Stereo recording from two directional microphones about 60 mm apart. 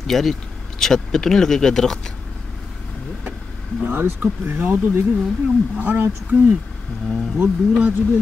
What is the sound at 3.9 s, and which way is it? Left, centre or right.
Speech, right.